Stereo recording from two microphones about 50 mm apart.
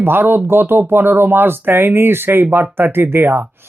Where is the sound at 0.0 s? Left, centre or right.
Right.